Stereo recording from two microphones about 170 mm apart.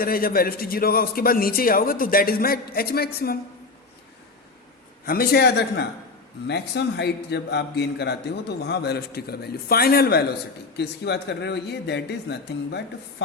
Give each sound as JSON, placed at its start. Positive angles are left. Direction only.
{"t": 0.0, "sound": "a man's voice", "side_deg": 60}
{"t": 5.0, "sound": "a man's voice", "side_deg": 60}
{"t": 6.5, "sound": "a man's voice", "side_deg": 85}
{"t": 10.8, "sound": "speech", "side_deg": 80}